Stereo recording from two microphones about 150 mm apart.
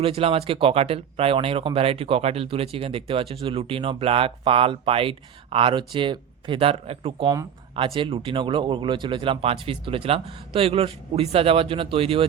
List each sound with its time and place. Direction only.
0.0 s speech: 40° right (ahead or behind)